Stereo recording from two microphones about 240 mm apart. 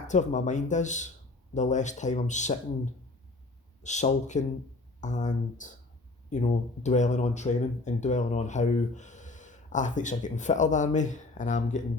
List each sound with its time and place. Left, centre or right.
0.1 s speech: left
3.8 s speech: left